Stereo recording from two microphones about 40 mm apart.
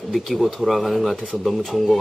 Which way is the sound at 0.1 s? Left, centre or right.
Centre.